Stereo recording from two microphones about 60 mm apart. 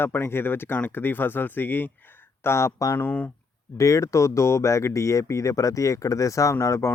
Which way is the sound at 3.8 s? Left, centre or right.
Left.